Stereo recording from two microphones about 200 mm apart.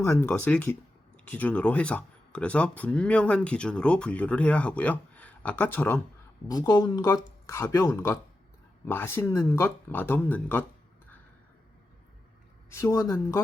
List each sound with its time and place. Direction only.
0.0 s speech: 10° left (ahead or behind)
12.7 s speech: 15° left (ahead or behind)